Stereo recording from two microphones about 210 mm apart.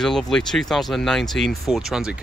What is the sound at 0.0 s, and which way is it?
Speech, centre (ahead or behind).